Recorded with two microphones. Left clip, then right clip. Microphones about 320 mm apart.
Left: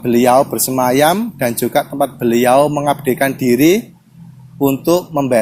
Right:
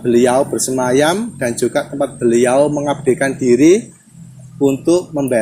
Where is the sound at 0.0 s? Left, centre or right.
Left.